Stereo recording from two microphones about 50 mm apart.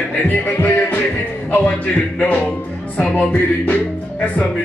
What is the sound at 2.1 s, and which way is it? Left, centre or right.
Speech, left.